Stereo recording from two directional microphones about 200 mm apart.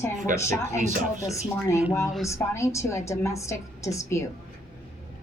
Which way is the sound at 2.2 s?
15° left (ahead or behind).